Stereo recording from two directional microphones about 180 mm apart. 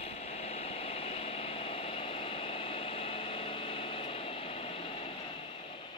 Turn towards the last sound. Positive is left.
turn(degrees=30)  # may be behind; listen again after turning